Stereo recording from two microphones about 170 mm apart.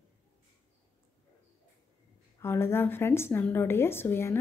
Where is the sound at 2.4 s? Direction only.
15° left (ahead or behind).